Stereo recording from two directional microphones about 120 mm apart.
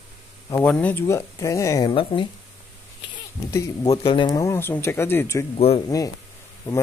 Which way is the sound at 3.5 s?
30° left (ahead or behind).